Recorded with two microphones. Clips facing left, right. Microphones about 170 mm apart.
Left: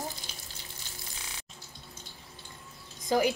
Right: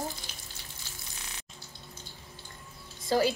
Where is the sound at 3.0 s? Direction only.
20° left (ahead or behind).